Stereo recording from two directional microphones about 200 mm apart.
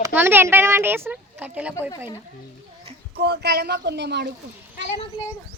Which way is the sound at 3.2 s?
55° right (ahead or behind).